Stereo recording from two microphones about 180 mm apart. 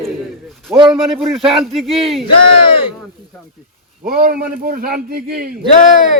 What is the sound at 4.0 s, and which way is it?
A man's voice, 50° right (ahead or behind).